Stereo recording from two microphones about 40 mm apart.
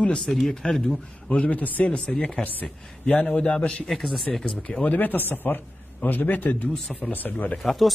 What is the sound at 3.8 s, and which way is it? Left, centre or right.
Speech, centre.